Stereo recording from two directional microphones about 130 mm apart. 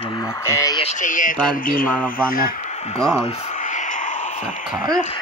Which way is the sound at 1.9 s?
10° left (ahead or behind).